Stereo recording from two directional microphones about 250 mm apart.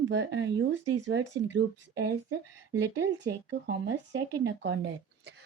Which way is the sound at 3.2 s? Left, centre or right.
Right.